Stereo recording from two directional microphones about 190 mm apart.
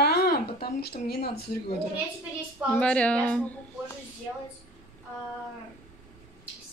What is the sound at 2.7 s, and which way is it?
Speech, 5° left (ahead or behind).